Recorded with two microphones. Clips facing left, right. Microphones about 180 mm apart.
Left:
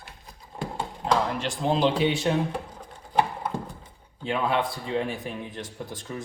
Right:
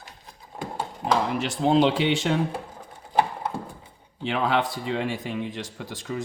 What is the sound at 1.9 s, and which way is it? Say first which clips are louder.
Speech: right 1 dB; 85° right.